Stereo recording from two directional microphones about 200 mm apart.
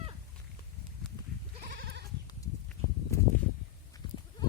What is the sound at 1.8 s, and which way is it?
Goat, 55° right (ahead or behind).